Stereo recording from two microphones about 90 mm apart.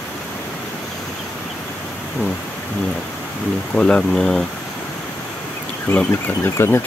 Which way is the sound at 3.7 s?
10° left (ahead or behind).